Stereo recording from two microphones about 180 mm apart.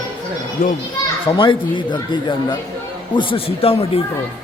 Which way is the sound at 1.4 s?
25° left (ahead or behind).